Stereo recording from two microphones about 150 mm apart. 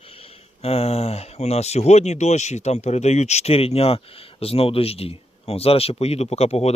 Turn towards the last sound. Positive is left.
turn(degrees=45)  # may be behind; listen again after turning